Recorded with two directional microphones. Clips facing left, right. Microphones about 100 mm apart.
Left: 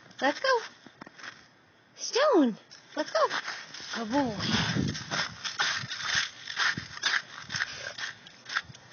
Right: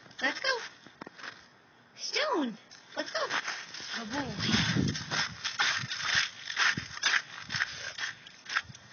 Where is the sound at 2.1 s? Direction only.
60° left (ahead or behind).